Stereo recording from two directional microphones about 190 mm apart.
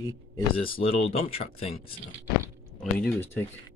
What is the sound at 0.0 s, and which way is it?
Speech, 25° left (ahead or behind).